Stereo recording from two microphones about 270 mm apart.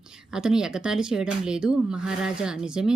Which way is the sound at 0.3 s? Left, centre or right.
Centre.